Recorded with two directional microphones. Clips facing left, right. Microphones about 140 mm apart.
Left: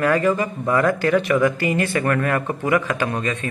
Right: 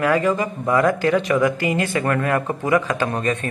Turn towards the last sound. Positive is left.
turn(degrees=-40)  # may be behind; listen again after turning